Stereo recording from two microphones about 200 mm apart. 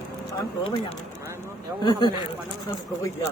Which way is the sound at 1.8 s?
20° left (ahead or behind).